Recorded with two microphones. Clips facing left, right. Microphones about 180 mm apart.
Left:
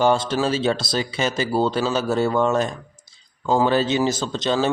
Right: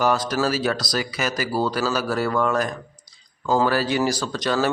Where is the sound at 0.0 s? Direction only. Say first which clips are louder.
Left 2 dB; 25° left (ahead or behind).